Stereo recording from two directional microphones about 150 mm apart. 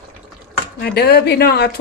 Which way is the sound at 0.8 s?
90° left.